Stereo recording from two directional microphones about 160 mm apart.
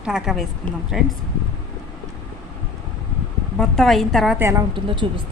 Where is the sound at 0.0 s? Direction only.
Centre (ahead or behind).